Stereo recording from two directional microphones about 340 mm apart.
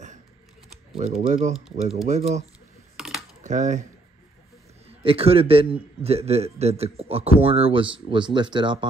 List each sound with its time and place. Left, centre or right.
0.9 s speech: centre
3.0 s typing: centre
3.4 s speech: right
4.8 s a man's voice: centre